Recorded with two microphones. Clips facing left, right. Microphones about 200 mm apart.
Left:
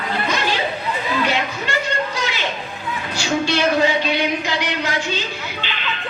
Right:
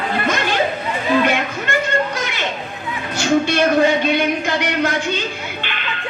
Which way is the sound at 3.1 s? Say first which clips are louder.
Right 5 dB; 55° right (ahead or behind).